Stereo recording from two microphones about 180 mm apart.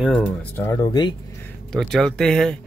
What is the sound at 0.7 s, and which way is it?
Speech, 25° left (ahead or behind).